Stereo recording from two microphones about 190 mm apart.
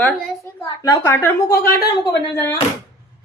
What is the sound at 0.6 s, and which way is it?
A woman's voice, 15° left (ahead or behind).